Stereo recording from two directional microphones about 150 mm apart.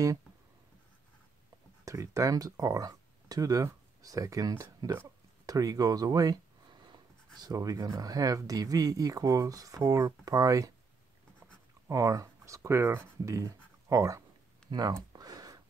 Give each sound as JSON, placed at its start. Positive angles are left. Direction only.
{"t": 1.9, "sound": "speech", "side_deg": -20}
{"t": 11.9, "sound": "speech", "side_deg": -20}
{"t": 14.7, "sound": "a sound", "side_deg": -25}